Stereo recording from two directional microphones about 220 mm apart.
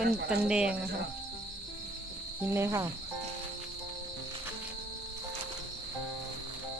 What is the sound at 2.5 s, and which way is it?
Cricket, 10° right (ahead or behind).